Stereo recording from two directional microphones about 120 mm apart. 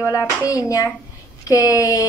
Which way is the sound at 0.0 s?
25° left (ahead or behind).